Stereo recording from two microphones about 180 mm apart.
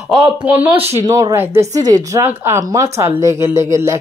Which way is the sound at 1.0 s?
20° right (ahead or behind).